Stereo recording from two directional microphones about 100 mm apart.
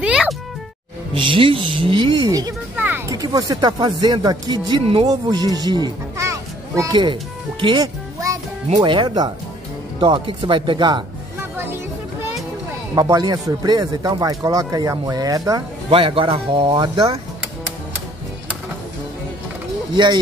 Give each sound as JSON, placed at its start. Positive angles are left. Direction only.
{"t": 0.0, "sound": "music", "side_deg": -5}
{"t": 1.1, "sound": "speech", "side_deg": -55}
{"t": 2.7, "sound": "a sound", "side_deg": -15}
{"t": 3.1, "sound": "a child's voice", "side_deg": -40}
{"t": 6.9, "sound": "speech", "side_deg": -50}
{"t": 11.5, "sound": "music", "side_deg": -25}
{"t": 12.9, "sound": "speech", "side_deg": -40}
{"t": 15.9, "sound": "speech", "side_deg": -60}